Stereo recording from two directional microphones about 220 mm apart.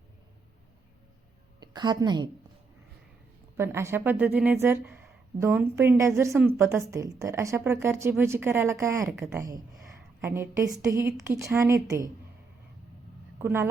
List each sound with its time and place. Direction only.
1.5 s a woman's voice: 20° right (ahead or behind)
3.6 s a woman's voice: 10° right (ahead or behind)
10.2 s a woman's voice: 10° right (ahead or behind)
13.4 s a woman's voice: 10° right (ahead or behind)